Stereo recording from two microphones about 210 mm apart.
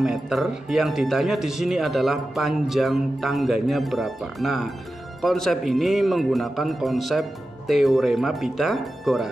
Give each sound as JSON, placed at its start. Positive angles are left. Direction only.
{"t": 0.0, "sound": "speech", "side_deg": 0}